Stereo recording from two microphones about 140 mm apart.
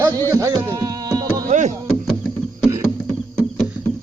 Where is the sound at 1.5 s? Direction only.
60° right (ahead or behind).